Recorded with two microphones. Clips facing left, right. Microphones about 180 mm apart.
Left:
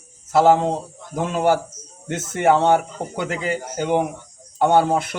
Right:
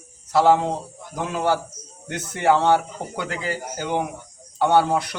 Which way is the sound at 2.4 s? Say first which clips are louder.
Left 2 dB; 20° left (ahead or behind).